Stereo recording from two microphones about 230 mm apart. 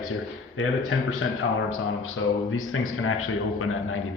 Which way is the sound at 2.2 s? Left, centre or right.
Left.